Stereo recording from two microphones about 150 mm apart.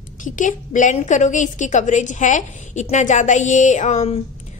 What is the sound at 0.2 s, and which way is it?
A woman's voice, 60° left (ahead or behind).